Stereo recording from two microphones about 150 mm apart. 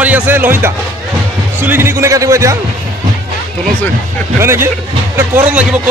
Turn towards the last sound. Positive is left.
turn(degrees=-10)  # may be behind; listen again after turning